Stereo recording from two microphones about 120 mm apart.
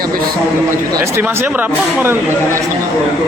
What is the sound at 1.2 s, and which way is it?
Speech, 15° right (ahead or behind).